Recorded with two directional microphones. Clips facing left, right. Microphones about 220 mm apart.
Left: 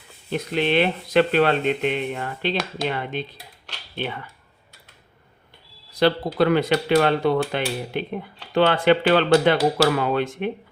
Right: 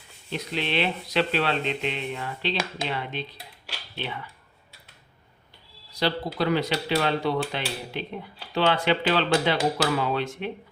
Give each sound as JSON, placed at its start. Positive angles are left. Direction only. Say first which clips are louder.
{"t": 0.3, "sound": "speech", "louder": "left 7 dB", "side_deg": 50}
{"t": 5.9, "sound": "speech", "louder": "left 7 dB", "side_deg": 55}